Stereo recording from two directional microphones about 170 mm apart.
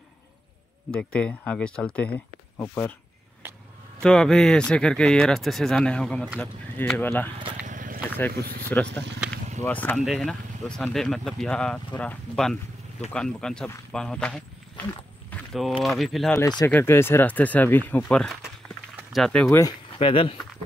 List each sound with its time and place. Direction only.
0.9 s speech: 5° left (ahead or behind)
4.0 s speech: 5° left (ahead or behind)
7.6 s a sound: 50° right (ahead or behind)
8.7 s speech: 10° left (ahead or behind)
15.2 s walk: 5° left (ahead or behind)
16.0 s speech: centre (ahead or behind)
16.3 s speech: 20° left (ahead or behind); by 19.5 s centre (ahead or behind)
20.0 s speech: 30° left (ahead or behind)